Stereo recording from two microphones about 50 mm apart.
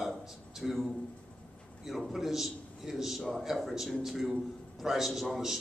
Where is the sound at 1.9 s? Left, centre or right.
Centre.